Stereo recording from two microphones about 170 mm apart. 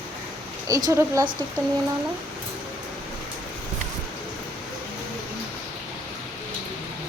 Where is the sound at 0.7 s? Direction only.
20° right (ahead or behind).